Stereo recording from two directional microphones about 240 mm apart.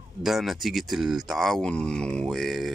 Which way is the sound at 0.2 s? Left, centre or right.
Centre.